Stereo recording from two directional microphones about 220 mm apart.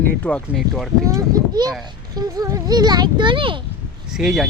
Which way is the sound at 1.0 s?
15° right (ahead or behind).